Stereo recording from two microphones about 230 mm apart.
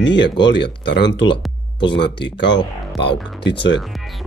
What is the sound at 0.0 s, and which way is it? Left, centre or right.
Speech, left.